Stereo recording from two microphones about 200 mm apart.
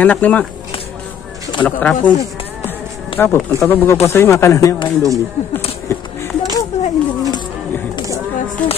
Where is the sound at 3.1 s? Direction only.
25° left (ahead or behind).